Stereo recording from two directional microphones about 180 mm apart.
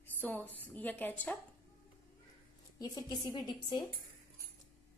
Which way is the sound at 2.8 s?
20° left (ahead or behind).